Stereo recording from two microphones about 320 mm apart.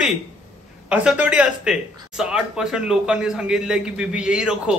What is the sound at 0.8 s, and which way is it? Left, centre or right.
Speech, centre.